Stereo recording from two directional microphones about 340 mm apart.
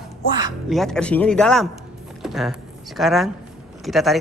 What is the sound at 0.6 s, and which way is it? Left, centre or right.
Speech, centre.